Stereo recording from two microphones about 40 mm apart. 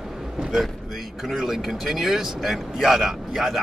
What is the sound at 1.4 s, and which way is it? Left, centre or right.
Speech, centre.